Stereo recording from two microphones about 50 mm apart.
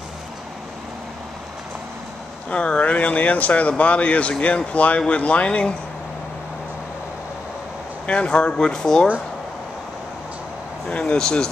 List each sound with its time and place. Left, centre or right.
2.5 s speech: left
8.1 s speech: centre
10.9 s speech: left